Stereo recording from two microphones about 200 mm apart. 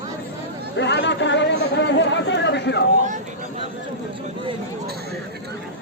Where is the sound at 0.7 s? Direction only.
60° left (ahead or behind).